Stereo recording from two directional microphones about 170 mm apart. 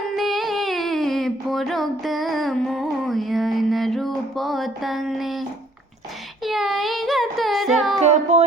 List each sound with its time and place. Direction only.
0.2 s a sound: centre (ahead or behind)
6.4 s music: centre (ahead or behind)
8.0 s music: 40° right (ahead or behind)